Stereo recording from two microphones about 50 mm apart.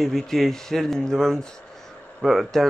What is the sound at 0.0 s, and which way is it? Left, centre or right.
Speech, centre.